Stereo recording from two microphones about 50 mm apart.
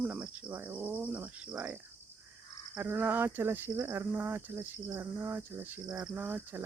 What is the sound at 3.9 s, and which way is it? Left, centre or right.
Speech, right.